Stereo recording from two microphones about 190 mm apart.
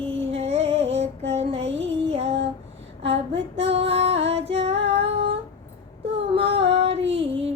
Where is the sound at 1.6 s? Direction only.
70° right (ahead or behind).